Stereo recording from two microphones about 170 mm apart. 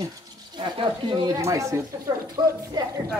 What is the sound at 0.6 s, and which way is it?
Speech, 30° right (ahead or behind).